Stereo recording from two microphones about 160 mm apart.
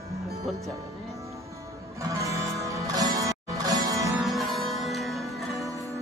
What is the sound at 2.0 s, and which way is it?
Music, 20° right (ahead or behind).